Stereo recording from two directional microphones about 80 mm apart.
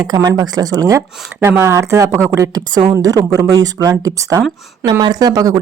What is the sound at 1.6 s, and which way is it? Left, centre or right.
Speech, right.